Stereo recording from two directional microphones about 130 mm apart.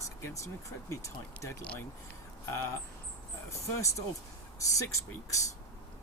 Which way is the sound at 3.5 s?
25° left (ahead or behind).